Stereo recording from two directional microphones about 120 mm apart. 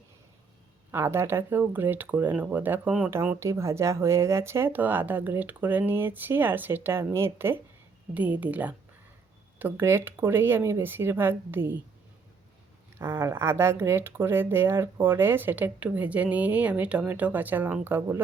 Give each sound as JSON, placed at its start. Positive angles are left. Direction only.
{"t": 0.9, "sound": "speech", "side_deg": -20}
{"t": 3.1, "sound": "speech", "side_deg": -20}
{"t": 13.0, "sound": "speech", "side_deg": -20}